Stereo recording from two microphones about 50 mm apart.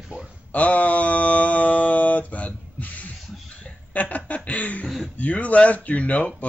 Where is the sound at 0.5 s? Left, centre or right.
Left.